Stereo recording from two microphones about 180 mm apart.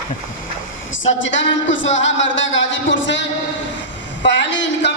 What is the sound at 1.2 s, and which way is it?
Speech, 90° left.